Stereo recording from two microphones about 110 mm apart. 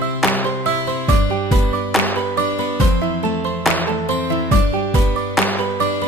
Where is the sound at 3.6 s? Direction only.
Centre (ahead or behind).